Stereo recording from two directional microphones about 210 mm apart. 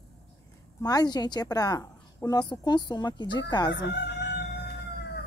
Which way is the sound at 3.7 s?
55° left (ahead or behind).